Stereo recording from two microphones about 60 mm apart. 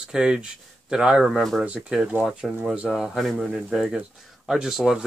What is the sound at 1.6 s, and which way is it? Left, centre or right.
Speech, right.